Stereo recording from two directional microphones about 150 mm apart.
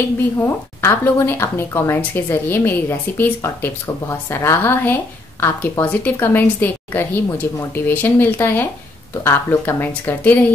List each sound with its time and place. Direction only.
0.7 s a woman's voice: 15° left (ahead or behind)